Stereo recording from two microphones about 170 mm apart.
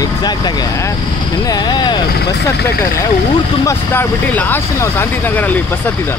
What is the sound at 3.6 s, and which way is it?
Speech, 15° left (ahead or behind).